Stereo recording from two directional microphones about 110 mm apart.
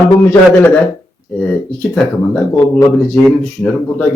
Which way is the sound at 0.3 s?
15° left (ahead or behind).